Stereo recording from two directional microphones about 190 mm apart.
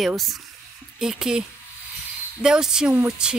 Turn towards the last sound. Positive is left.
turn(degrees=-5)  # may be behind; listen again after turning